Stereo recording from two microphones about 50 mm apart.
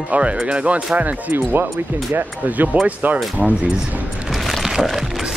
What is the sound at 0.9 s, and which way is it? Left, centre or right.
Speech, right.